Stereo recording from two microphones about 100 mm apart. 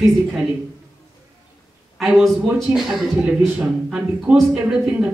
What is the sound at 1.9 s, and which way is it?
Speech, centre (ahead or behind).